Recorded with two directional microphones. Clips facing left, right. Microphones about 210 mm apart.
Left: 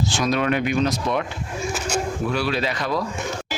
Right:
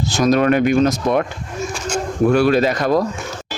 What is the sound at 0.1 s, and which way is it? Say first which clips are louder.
Speech: right 10 dB; 45° right (ahead or behind).